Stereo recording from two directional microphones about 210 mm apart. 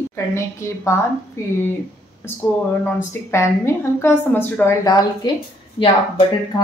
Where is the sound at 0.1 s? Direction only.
15° left (ahead or behind).